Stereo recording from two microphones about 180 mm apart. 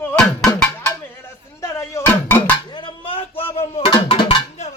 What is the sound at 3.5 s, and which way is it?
Music, 30° left (ahead or behind).